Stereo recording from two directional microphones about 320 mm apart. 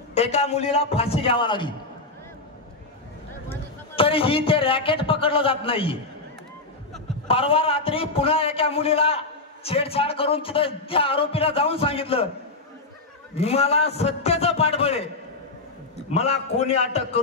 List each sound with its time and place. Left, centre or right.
0.1 s a man's voice: centre
3.9 s a man's voice: centre
7.2 s a man's voice: centre
13.3 s a man's voice: centre
16.1 s a man's voice: centre